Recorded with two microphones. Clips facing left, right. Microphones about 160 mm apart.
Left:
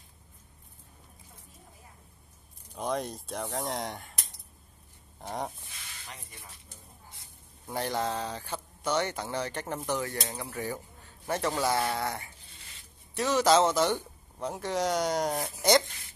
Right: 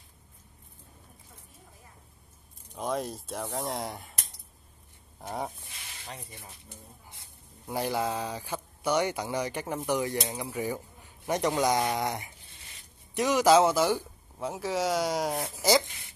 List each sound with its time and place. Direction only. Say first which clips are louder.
2.7 s speech: even; centre (ahead or behind)
5.2 s speech: right 1 dB; centre (ahead or behind)
6.0 s speech: right 6 dB; 30° right (ahead or behind)
7.6 s speech: right 2 dB; 10° right (ahead or behind)